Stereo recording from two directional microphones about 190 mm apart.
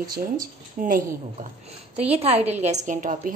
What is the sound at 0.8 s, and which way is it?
Speech, 45° right (ahead or behind).